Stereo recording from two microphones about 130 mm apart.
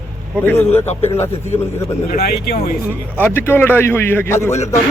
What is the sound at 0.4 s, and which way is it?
Speech, 15° left (ahead or behind).